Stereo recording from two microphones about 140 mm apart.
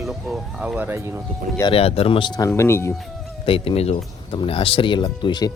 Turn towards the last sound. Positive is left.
turn(degrees=30)  # may be behind; listen again after turning